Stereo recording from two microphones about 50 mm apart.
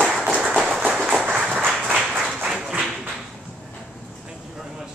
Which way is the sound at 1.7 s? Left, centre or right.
Centre.